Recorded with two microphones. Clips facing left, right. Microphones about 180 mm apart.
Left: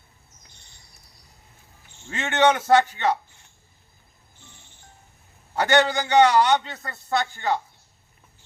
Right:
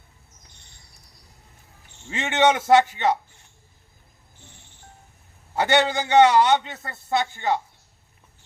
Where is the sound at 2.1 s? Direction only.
20° right (ahead or behind).